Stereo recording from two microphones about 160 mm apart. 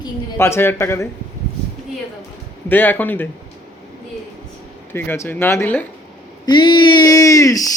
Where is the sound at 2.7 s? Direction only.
10° left (ahead or behind).